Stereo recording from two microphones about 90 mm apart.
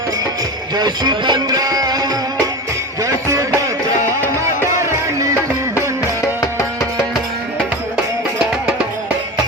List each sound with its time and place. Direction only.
0.8 s music: 50° right (ahead or behind)
6.2 s music: 35° left (ahead or behind)